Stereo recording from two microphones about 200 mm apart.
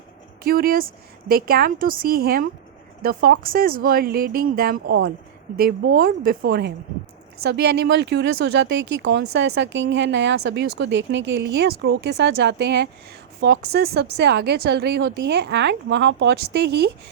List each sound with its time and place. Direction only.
0.4 s speech: 50° right (ahead or behind)